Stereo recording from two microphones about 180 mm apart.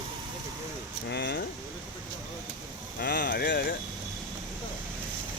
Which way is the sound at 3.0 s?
60° left (ahead or behind).